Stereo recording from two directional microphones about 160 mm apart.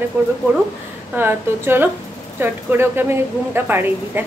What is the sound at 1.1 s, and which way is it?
A woman's voice, 15° right (ahead or behind).